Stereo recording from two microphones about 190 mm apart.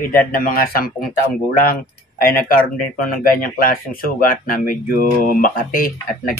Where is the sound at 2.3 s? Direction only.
50° left (ahead or behind).